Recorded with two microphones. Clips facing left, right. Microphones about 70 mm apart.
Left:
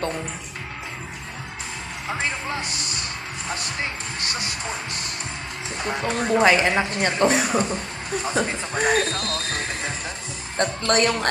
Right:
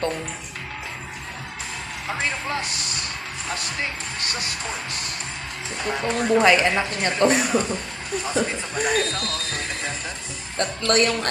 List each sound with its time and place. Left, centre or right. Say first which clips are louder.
5.7 s a woman's voice: right 1 dB; centre; by 11.3 s left